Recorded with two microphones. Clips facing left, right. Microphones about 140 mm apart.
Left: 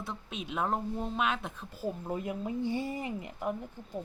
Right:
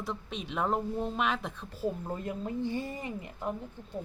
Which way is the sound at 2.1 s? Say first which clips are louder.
Left 1 dB; 10° left (ahead or behind).